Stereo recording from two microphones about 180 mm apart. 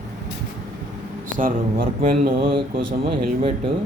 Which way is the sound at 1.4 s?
50° right (ahead or behind).